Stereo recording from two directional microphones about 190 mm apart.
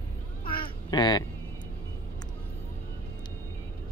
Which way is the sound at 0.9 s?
20° left (ahead or behind).